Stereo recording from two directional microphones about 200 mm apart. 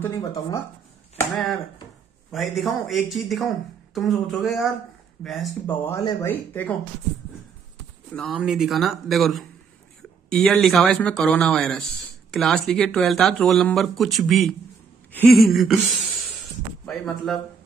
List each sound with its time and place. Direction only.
0.0 s speech: 15° left (ahead or behind)
2.3 s speech: centre (ahead or behind)
5.9 s speech: 15° left (ahead or behind)
8.1 s speech: centre (ahead or behind)
16.8 s speech: centre (ahead or behind)